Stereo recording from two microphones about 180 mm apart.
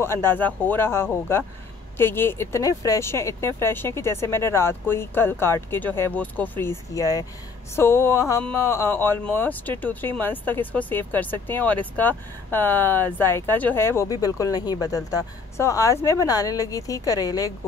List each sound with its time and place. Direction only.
0.0 s speech: 15° left (ahead or behind)